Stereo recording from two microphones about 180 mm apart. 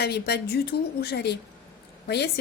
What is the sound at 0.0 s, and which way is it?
Speech, 65° left (ahead or behind).